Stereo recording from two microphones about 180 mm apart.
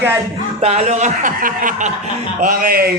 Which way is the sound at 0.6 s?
35° right (ahead or behind).